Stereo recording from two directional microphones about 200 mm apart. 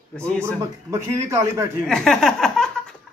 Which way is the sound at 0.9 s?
15° right (ahead or behind).